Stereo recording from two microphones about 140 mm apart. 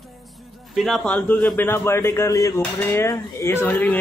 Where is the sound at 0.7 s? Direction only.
Centre (ahead or behind).